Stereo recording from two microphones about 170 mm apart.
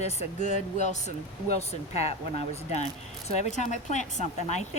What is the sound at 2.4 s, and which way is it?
A woman's voice, 40° left (ahead or behind).